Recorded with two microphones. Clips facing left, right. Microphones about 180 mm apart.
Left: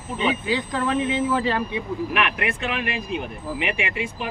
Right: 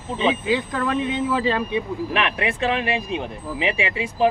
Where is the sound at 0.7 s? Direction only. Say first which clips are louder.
Even; centre (ahead or behind).